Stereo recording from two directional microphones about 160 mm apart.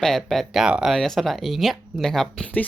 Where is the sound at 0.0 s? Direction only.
Centre (ahead or behind).